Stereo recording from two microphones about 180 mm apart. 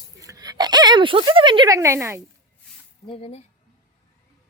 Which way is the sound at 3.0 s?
30° left (ahead or behind).